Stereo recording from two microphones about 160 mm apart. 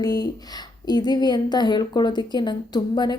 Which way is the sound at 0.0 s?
25° left (ahead or behind).